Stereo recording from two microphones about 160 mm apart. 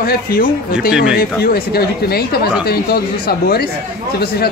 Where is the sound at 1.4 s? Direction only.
75° left (ahead or behind).